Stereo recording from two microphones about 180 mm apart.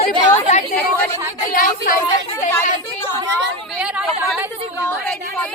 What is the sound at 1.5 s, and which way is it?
Speech, 50° left (ahead or behind).